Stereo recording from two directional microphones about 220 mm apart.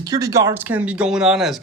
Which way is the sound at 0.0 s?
15° right (ahead or behind).